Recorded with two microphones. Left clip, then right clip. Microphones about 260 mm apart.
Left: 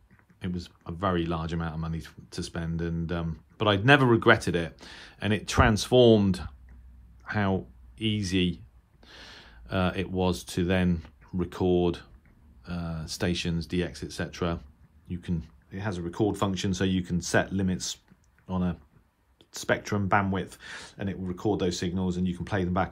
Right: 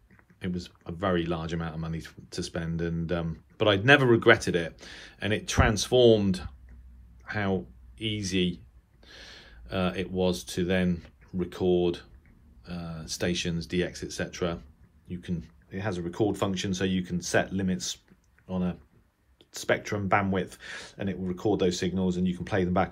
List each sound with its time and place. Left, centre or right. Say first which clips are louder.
0.4 s speech: right 1 dB; centre